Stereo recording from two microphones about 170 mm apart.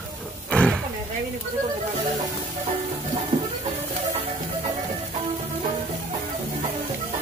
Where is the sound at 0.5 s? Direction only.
5° left (ahead or behind).